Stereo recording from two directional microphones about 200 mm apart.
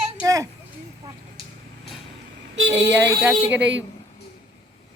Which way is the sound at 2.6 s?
65° right (ahead or behind).